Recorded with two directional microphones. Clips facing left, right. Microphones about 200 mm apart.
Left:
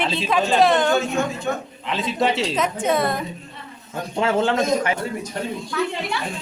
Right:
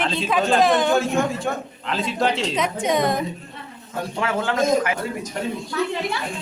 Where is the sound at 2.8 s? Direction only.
15° right (ahead or behind).